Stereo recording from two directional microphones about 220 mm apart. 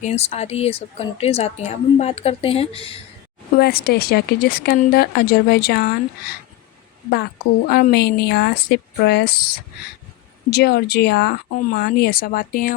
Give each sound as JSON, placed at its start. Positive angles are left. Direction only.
{"t": 0.0, "sound": "speech", "side_deg": 30}
{"t": 3.6, "sound": "speech", "side_deg": 45}
{"t": 7.7, "sound": "speech", "side_deg": 45}